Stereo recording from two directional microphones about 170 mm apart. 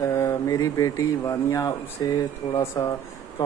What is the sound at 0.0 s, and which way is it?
Speech, 15° left (ahead or behind).